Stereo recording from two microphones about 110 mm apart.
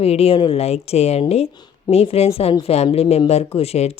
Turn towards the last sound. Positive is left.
turn(degrees=70)  # may be behind; listen again after turning